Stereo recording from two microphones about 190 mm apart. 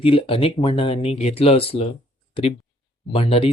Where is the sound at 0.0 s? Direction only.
30° left (ahead or behind).